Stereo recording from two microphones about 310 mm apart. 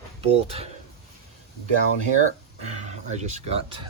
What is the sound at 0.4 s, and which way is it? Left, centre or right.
Speech, centre.